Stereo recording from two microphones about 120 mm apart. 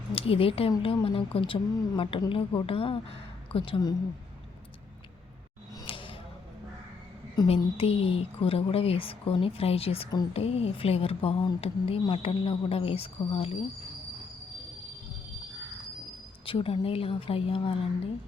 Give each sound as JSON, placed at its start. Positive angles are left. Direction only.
{"t": 0.1, "sound": "speech", "side_deg": 50}
{"t": 5.8, "sound": "a sound", "side_deg": 45}
{"t": 7.4, "sound": "speech", "side_deg": 55}
{"t": 16.5, "sound": "speech", "side_deg": 45}